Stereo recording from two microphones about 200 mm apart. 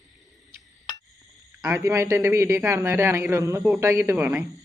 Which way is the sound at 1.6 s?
15° right (ahead or behind).